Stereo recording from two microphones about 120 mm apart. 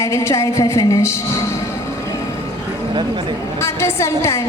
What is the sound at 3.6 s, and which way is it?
Speech, 20° left (ahead or behind).